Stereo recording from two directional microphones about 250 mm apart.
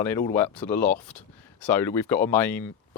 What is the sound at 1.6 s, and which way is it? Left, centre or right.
Speech, centre.